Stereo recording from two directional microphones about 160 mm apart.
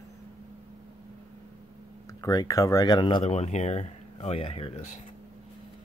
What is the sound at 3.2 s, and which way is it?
Speech, 40° left (ahead or behind).